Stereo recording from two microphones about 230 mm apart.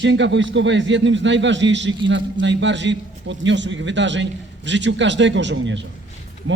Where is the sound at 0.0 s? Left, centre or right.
Right.